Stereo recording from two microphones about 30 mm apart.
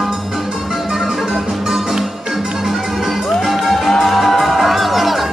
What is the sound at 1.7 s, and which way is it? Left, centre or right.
Music, centre.